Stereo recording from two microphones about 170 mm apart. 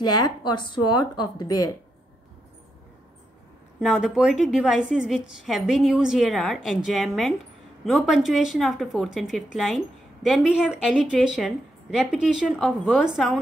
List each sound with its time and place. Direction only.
0.0 s a woman's voice: 25° left (ahead or behind)
3.8 s a woman's voice: 5° right (ahead or behind)